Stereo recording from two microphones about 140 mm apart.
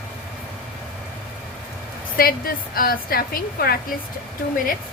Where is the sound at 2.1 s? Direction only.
90° left.